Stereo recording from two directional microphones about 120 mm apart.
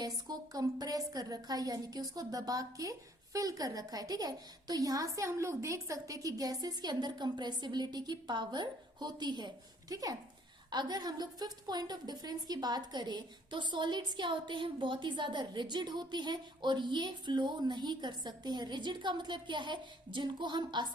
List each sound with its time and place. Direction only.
0.0 s a woman's voice: 35° right (ahead or behind)